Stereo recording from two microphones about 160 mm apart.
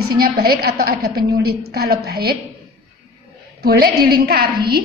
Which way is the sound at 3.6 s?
70° right (ahead or behind).